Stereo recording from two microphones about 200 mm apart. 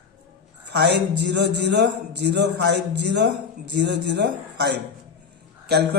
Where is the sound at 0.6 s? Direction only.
55° right (ahead or behind).